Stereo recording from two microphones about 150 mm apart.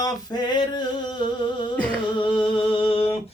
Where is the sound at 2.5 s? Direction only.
35° left (ahead or behind).